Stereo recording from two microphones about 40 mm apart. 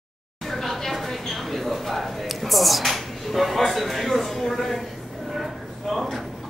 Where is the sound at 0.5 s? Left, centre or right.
Centre.